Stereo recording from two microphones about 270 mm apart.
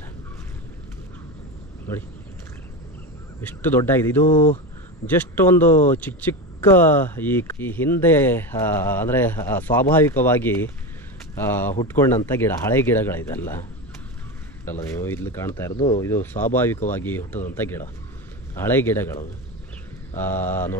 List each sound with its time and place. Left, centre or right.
3.3 s speech: centre
4.3 s speech: left
5.0 s speech: centre
20.2 s speech: centre